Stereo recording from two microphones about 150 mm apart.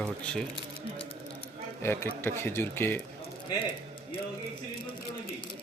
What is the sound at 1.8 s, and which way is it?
Speech, 15° left (ahead or behind).